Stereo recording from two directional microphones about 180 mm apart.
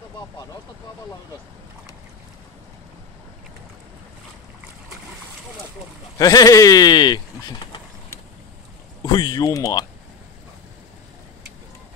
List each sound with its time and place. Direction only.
6.1 s speech: 20° left (ahead or behind)
9.0 s speech: 25° left (ahead or behind)